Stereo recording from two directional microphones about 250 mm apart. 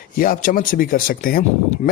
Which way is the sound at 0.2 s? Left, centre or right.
Left.